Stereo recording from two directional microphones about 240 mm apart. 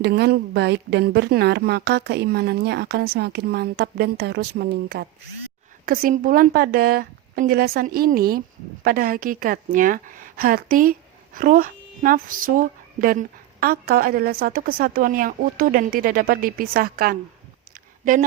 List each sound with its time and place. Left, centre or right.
0.0 s a woman's voice: right